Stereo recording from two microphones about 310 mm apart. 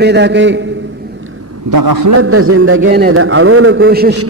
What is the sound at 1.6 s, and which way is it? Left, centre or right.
Speech, right.